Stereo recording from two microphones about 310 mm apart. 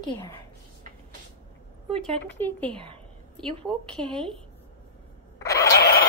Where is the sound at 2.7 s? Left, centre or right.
Centre.